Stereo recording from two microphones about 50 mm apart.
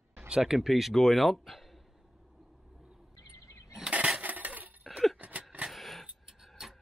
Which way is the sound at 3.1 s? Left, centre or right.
Left.